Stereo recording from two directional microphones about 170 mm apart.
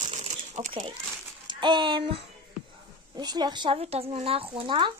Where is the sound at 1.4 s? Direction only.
25° right (ahead or behind).